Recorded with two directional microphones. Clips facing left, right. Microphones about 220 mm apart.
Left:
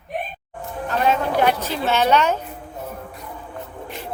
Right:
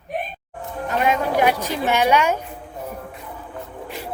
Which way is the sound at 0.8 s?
10° right (ahead or behind).